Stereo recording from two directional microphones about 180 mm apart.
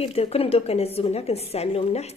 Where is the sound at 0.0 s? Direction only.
35° left (ahead or behind).